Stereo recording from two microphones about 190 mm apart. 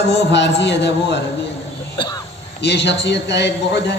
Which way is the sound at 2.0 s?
20° left (ahead or behind).